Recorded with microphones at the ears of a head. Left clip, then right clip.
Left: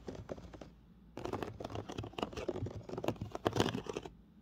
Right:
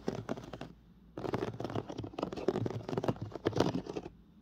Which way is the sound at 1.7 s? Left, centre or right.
Right.